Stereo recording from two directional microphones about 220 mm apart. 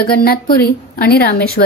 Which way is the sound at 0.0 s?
40° left (ahead or behind).